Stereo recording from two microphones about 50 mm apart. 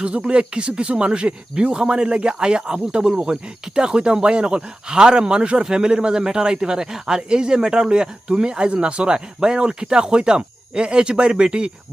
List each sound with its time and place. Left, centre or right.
0.0 s speech: right